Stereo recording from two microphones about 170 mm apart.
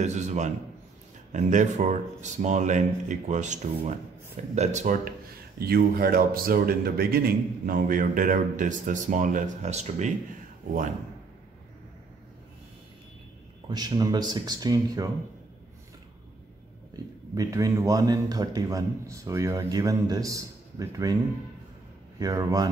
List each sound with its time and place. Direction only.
0.0 s a man's voice: 40° right (ahead or behind)
5.6 s a man's voice: 65° right (ahead or behind); by 10.1 s 40° right (ahead or behind)
13.7 s a man's voice: 25° right (ahead or behind)
16.9 s a man's voice: 20° right (ahead or behind)
22.2 s a man's voice: 20° right (ahead or behind)